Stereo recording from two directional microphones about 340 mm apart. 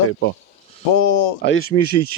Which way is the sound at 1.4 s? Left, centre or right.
Left.